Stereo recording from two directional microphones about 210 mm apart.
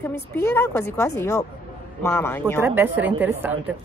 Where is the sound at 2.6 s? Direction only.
10° right (ahead or behind).